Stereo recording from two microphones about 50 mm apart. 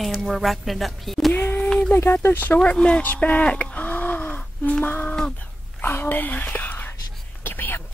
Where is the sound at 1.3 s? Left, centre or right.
Left.